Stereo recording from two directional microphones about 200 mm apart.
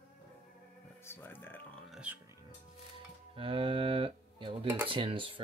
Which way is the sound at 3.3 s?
25° right (ahead or behind).